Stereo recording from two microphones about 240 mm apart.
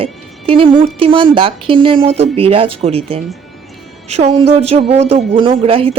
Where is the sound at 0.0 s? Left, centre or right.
Right.